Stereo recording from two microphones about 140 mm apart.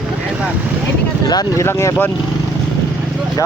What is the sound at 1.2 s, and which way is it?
Speech, 30° left (ahead or behind).